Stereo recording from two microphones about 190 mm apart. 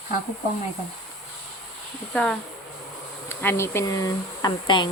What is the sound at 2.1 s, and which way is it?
Speech, 5° left (ahead or behind).